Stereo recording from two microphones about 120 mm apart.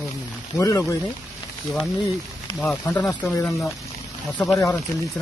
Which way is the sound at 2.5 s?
15° left (ahead or behind).